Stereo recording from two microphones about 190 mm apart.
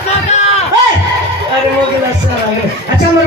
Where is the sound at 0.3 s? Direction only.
35° left (ahead or behind).